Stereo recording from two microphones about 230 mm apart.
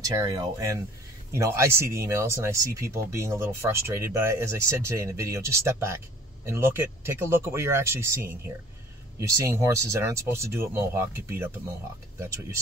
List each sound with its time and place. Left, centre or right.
0.0 s speech: centre